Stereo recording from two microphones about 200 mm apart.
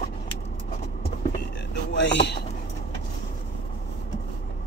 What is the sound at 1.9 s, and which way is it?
Speech, 60° left (ahead or behind).